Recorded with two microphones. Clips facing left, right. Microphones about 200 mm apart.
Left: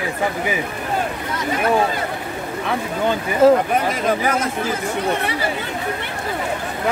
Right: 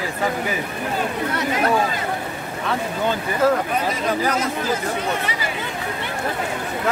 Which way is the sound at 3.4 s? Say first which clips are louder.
Left 6 dB; 25° left (ahead or behind).